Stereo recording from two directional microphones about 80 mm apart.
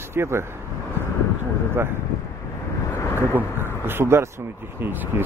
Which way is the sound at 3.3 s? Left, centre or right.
Right.